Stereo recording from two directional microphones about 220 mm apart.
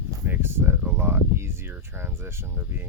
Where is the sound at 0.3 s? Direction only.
10° right (ahead or behind).